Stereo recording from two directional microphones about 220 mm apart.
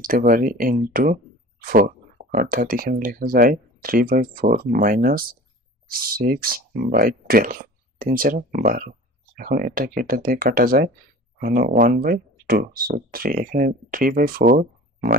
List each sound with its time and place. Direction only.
0.0 s speech: 40° right (ahead or behind)